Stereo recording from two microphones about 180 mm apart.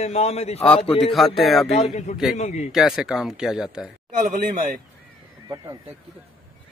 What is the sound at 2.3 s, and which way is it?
Speech, 40° left (ahead or behind).